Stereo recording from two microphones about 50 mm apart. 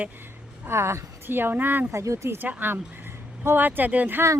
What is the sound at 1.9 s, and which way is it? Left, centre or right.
Speech, right.